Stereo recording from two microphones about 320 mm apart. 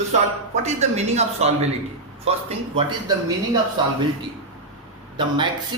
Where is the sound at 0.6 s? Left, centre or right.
Right.